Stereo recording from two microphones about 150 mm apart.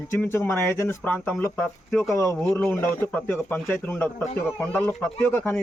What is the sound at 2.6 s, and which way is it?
Speech, 15° left (ahead or behind).